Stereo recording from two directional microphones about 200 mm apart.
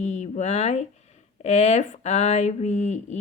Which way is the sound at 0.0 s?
35° left (ahead or behind).